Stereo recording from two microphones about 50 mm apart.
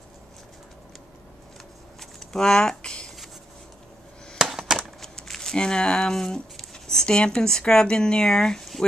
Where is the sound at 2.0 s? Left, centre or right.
Centre.